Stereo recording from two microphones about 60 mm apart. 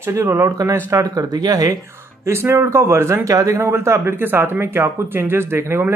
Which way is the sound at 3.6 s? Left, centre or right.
Right.